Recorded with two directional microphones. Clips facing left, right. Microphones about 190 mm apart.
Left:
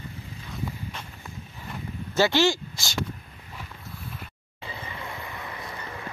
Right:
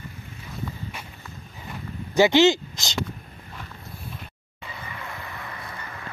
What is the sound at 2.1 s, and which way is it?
Speech, 15° right (ahead or behind).